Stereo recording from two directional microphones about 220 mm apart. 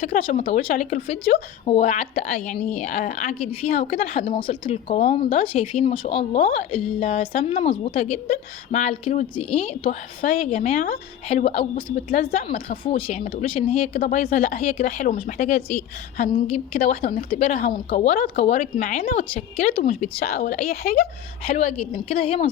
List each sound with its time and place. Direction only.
0.1 s a woman's voice: 25° left (ahead or behind)
11.3 s a woman's voice: 25° left (ahead or behind); by 21.0 s 45° left (ahead or behind)
21.4 s speech: 30° left (ahead or behind)